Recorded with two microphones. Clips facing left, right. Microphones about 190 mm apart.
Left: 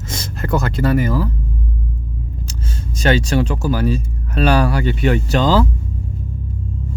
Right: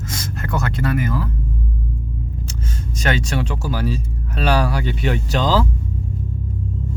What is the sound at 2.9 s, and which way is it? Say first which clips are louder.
Speech: left 6 dB; 30° left (ahead or behind).